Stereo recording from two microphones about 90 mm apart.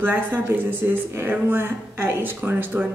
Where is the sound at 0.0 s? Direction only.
25° right (ahead or behind).